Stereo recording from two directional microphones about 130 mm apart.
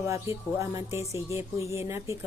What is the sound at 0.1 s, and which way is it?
A woman's voice, 20° right (ahead or behind).